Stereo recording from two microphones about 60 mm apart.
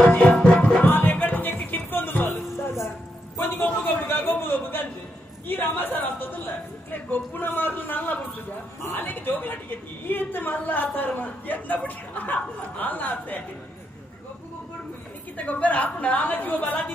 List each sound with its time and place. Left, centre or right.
0.2 s music: centre
0.8 s music: left
3.3 s a sound: left
5.5 s a woman's voice: left
15.3 s a woman's voice: left